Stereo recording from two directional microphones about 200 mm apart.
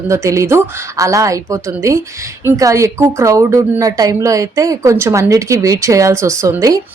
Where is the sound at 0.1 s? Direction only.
15° right (ahead or behind).